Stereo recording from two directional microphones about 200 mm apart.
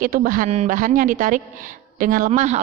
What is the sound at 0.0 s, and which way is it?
A woman's voice, 45° right (ahead or behind).